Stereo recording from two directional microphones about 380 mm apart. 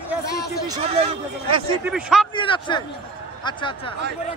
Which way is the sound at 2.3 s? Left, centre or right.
Centre.